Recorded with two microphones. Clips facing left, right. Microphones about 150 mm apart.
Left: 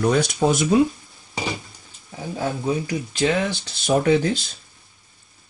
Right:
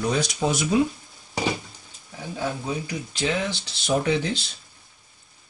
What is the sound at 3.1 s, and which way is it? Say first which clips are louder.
Speech: left 5 dB; 50° left (ahead or behind).